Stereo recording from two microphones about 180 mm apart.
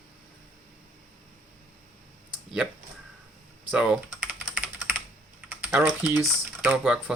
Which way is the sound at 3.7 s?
5° right (ahead or behind).